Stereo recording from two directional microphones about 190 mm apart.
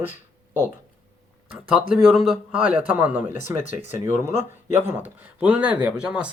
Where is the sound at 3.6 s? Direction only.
40° left (ahead or behind).